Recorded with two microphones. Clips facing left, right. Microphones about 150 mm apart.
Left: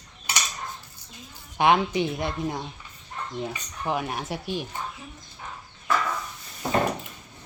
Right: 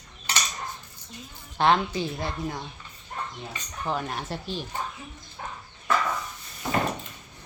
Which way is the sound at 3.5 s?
10° left (ahead or behind).